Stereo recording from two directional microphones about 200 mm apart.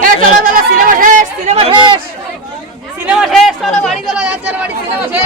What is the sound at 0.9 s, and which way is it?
Speech, 40° right (ahead or behind).